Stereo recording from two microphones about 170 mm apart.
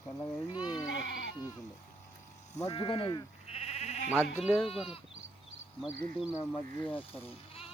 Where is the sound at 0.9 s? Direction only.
90° left.